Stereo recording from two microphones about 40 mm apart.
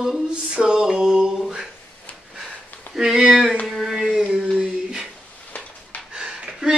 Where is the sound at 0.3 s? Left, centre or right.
Right.